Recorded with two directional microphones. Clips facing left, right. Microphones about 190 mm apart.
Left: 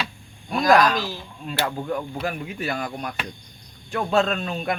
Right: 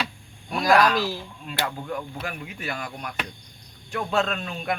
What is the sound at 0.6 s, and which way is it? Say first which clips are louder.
Speech: left 1 dB; 40° left (ahead or behind).